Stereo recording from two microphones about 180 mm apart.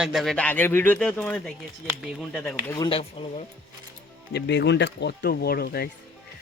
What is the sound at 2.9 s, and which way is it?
Speech, 30° left (ahead or behind).